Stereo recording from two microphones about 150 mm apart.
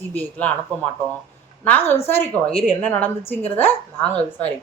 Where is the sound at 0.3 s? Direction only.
10° left (ahead or behind).